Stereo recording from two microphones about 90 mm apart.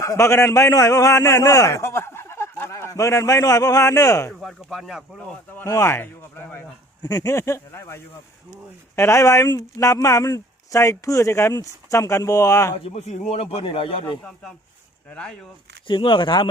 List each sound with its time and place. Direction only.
0.0 s a man's voice: 35° left (ahead or behind)
4.3 s speech: centre (ahead or behind)
5.6 s speech: 30° left (ahead or behind)
7.0 s speech: 45° left (ahead or behind)
13.4 s speech: 90° left
15.1 s speech: 10° left (ahead or behind)
15.9 s speech: 70° left (ahead or behind)